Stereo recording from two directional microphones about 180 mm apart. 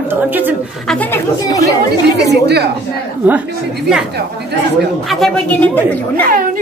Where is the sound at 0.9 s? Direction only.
10° left (ahead or behind).